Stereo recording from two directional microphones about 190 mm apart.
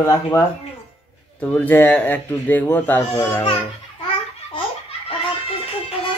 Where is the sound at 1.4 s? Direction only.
10° left (ahead or behind).